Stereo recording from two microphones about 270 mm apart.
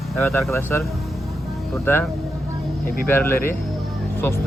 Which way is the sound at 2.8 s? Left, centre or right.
Left.